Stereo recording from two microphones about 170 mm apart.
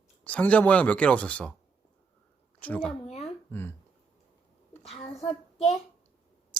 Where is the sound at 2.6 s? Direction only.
10° left (ahead or behind).